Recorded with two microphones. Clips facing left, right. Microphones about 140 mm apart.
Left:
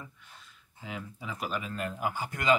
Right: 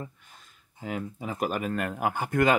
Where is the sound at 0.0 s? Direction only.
45° right (ahead or behind).